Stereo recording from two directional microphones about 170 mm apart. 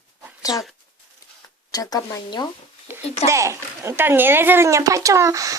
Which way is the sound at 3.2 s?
15° right (ahead or behind).